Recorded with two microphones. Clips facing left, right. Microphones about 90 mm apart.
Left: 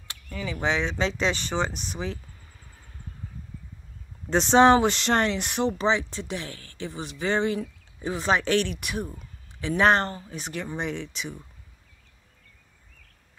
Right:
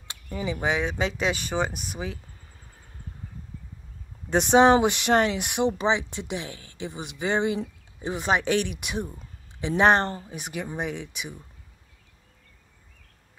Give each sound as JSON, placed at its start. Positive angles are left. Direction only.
{"t": 0.1, "sound": "a sound", "side_deg": -25}
{"t": 0.6, "sound": "speech", "side_deg": -10}
{"t": 4.3, "sound": "speech", "side_deg": -10}
{"t": 10.3, "sound": "speech", "side_deg": -10}